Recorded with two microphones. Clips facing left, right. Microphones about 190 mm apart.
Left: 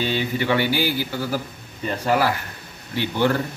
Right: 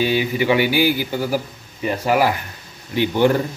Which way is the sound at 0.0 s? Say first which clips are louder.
Right 4 dB; 10° right (ahead or behind).